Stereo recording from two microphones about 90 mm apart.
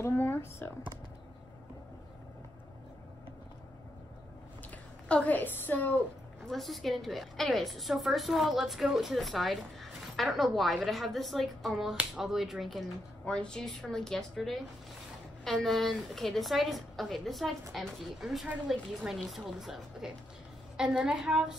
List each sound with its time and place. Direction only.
0.0 s a sound: 25° left (ahead or behind)
5.0 s speech: 15° left (ahead or behind)
6.4 s a woman's voice: centre (ahead or behind)
13.2 s a woman's voice: 10° left (ahead or behind); by 21.5 s 10° right (ahead or behind)